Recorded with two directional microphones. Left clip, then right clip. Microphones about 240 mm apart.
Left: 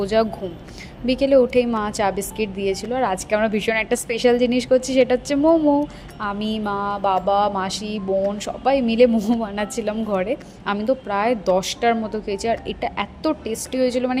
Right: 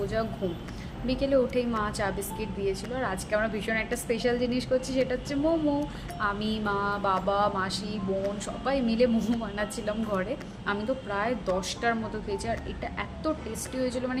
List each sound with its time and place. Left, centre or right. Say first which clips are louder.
0.0 s a woman's voice: left 10 dB; left